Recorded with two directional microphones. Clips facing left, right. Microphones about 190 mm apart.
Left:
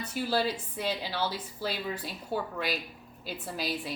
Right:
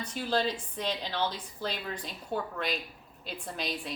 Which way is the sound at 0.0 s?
10° left (ahead or behind).